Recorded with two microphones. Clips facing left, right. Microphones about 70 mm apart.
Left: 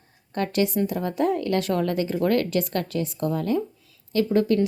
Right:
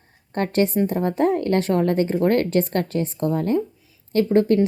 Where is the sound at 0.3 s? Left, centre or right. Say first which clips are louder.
Right 3 dB; right.